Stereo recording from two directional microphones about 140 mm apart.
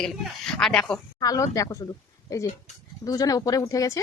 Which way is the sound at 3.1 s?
25° left (ahead or behind).